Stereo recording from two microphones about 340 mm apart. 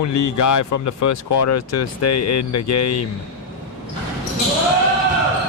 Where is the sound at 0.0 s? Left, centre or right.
Left.